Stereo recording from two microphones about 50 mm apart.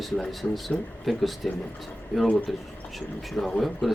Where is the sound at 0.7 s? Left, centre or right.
Centre.